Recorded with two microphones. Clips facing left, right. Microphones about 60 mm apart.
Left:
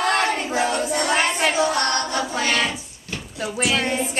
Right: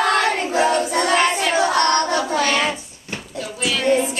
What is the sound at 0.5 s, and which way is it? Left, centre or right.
Child singing, right.